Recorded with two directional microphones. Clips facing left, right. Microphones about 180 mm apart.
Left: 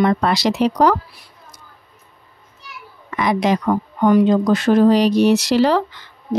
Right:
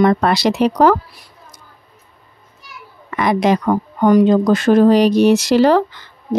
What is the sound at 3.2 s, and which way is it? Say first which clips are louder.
Speech: right 3 dB; 50° right (ahead or behind).